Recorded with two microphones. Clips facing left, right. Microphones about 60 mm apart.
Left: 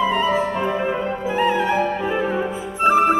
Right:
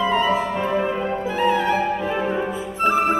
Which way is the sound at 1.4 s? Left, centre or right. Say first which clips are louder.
Left 1 dB; left.